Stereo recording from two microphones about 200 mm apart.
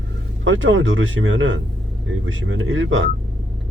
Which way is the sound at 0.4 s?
75° right (ahead or behind).